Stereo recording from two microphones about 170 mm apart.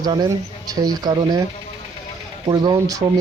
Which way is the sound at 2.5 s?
25° right (ahead or behind).